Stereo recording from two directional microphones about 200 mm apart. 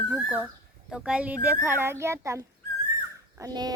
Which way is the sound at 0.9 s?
5° right (ahead or behind).